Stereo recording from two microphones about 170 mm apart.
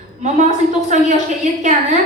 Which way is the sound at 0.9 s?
45° right (ahead or behind).